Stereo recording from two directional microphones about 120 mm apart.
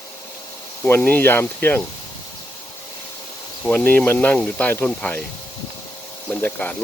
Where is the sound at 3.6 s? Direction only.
15° left (ahead or behind).